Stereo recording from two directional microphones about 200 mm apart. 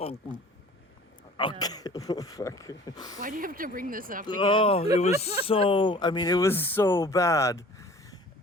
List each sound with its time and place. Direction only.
1.4 s speech: 20° left (ahead or behind)
3.2 s speech: 45° right (ahead or behind)
4.3 s speech: 25° left (ahead or behind)